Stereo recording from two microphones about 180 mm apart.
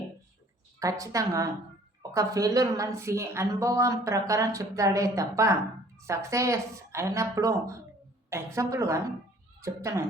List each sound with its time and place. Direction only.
0.8 s a woman's voice: 20° right (ahead or behind)